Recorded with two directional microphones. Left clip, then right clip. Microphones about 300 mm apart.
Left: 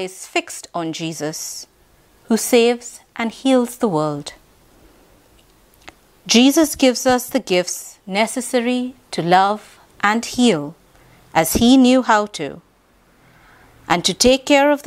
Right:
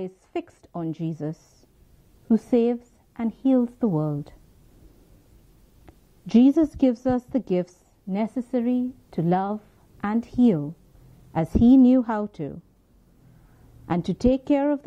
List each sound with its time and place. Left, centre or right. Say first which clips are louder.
0.0 s a woman's voice: left 10 dB; centre
5.9 s a woman's voice: left 15 dB; centre